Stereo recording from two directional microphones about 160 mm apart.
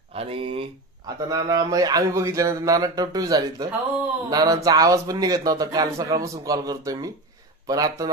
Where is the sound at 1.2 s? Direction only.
25° right (ahead or behind).